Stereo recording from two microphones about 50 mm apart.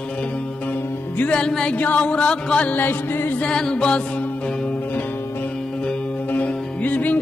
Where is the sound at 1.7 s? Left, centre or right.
Left.